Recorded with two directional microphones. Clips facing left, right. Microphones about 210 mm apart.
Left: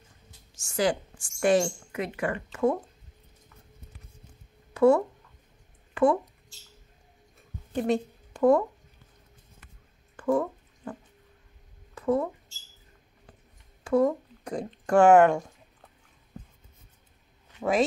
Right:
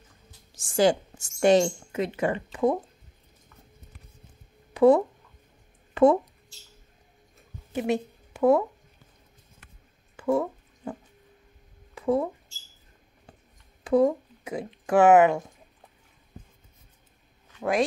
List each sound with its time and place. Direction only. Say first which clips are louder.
0.6 s a woman's voice: right 5 dB; 30° right (ahead or behind)
4.7 s speech: right 2 dB; 15° right (ahead or behind)
7.7 s speech: even; 5° right (ahead or behind)
10.1 s a sound: right 1 dB; 10° right (ahead or behind)
11.9 s a sound: right 1 dB; 15° right (ahead or behind)
13.8 s speech: right 2 dB; 15° right (ahead or behind)
14.4 s speech: left 1 dB; 5° right (ahead or behind)
17.6 s speech: even; centre (ahead or behind)